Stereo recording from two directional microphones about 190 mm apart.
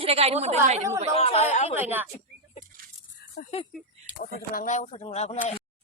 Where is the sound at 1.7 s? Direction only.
10° right (ahead or behind).